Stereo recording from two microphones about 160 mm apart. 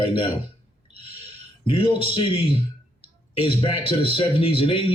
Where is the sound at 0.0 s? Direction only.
35° left (ahead or behind).